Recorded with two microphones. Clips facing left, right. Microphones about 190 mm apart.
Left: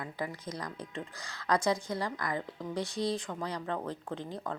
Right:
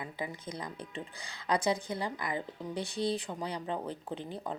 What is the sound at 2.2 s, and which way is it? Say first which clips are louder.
Speech: left 1 dB; 5° right (ahead or behind).